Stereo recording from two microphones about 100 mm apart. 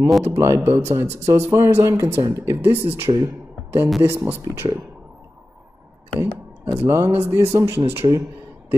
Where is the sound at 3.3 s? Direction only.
20° right (ahead or behind).